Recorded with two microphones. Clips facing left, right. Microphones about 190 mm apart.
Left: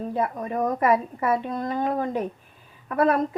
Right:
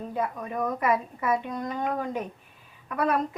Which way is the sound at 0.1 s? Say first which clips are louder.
Left 3 dB; 40° left (ahead or behind).